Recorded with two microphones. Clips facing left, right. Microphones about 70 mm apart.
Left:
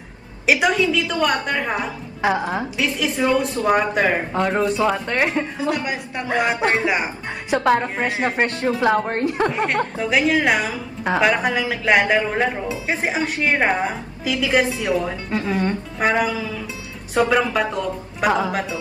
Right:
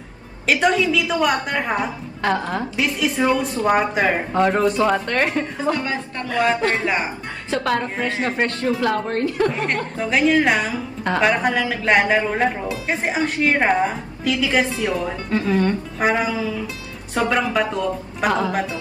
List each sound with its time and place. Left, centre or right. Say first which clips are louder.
0.5 s speech: even; centre
0.7 s a woman's voice: even; centre
2.2 s speech: left 1 dB; centre
3.2 s music: right 1 dB; centre
3.6 s speech: right 1 dB; centre
7.5 s a woman's voice: left 3 dB; left
9.5 s a woman's voice: left 2 dB; centre
14.9 s speech: left 1 dB; centre
16.1 s music: even; centre
17.1 s a woman's voice: left 2 dB; centre